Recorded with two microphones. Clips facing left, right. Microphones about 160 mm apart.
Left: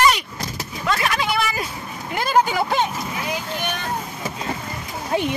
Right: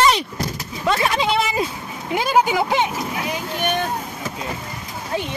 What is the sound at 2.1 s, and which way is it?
Speech, 10° right (ahead or behind).